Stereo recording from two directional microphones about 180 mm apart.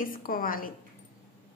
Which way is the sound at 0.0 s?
50° left (ahead or behind).